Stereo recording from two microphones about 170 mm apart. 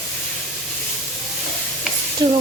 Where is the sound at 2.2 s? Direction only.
25° right (ahead or behind).